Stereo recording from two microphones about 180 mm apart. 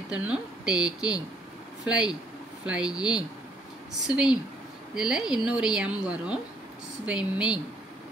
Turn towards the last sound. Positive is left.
turn(degrees=-5)  # may be behind; listen again after turning